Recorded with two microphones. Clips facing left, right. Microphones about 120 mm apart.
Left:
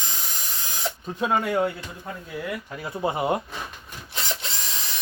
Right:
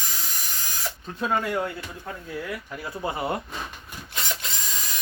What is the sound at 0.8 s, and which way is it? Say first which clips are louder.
Speech: left 3 dB; 15° left (ahead or behind).